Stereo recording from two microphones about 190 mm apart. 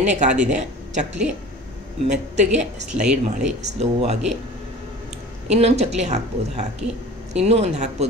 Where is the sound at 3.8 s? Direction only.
35° right (ahead or behind).